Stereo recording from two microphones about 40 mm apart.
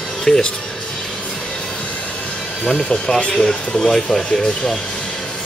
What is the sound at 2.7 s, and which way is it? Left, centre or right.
Speech, left.